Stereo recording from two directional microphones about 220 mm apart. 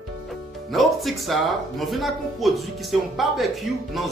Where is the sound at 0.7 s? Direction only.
Centre (ahead or behind).